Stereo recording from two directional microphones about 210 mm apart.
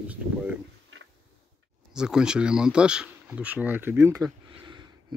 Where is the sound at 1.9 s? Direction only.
5° right (ahead or behind).